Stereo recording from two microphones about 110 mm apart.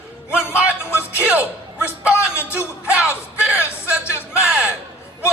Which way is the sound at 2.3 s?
25° left (ahead or behind).